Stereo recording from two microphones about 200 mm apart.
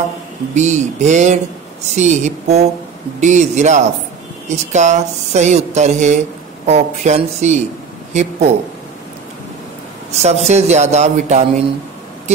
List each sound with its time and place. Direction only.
0.6 s speech: 35° right (ahead or behind)
10.1 s speech: 35° right (ahead or behind)